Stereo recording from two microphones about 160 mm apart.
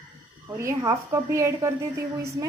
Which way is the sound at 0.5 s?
20° right (ahead or behind).